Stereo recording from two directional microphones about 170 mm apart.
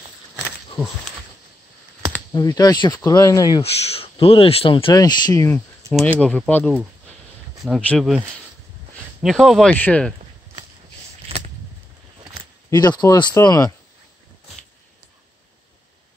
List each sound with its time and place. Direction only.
2.3 s speech: 20° left (ahead or behind)
3.6 s speech: 35° left (ahead or behind); by 5.6 s 15° left (ahead or behind)
6.1 s speech: 5° left (ahead or behind)
9.2 s speech: centre (ahead or behind)
11.2 s a sound: 40° right (ahead or behind)
12.6 s speech: 25° left (ahead or behind)